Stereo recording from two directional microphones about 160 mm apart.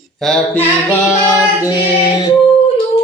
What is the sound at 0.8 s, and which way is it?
Speech, 20° left (ahead or behind).